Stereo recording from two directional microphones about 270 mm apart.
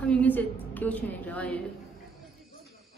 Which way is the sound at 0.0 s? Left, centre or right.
Centre.